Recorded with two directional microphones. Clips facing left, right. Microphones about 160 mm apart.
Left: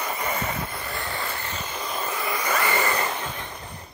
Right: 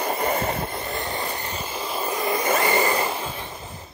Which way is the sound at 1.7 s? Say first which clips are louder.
Right 3 dB; 30° right (ahead or behind).